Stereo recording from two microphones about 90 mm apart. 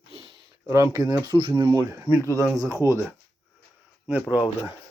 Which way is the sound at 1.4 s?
65° right (ahead or behind).